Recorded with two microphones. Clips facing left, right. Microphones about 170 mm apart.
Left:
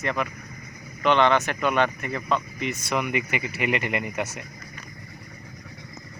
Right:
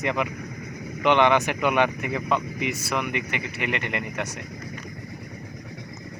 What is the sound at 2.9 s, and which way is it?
Speech, 5° left (ahead or behind).